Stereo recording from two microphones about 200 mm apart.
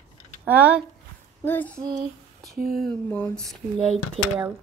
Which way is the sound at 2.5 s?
50° right (ahead or behind).